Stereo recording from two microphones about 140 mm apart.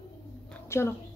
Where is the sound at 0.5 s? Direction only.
20° left (ahead or behind).